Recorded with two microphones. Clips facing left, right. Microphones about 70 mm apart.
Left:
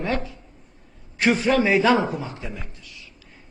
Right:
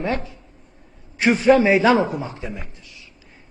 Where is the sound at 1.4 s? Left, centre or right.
Right.